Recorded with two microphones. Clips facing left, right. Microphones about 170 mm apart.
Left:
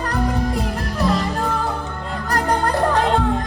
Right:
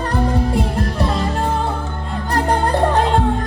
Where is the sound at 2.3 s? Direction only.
30° right (ahead or behind).